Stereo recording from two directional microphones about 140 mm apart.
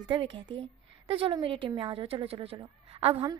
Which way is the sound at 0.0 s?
35° right (ahead or behind).